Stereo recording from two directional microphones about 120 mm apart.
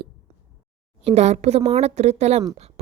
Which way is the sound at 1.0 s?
65° right (ahead or behind).